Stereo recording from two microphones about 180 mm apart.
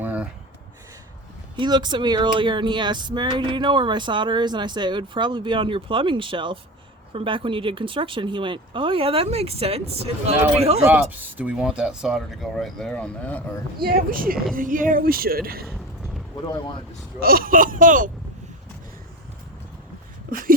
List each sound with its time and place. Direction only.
0.0 s a sound: 10° right (ahead or behind)
1.5 s speech: 25° right (ahead or behind)
10.8 s speech: 10° right (ahead or behind); by 13.4 s 10° left (ahead or behind)
13.8 s a woman's voice: 55° right (ahead or behind)
17.2 s speech: 55° right (ahead or behind)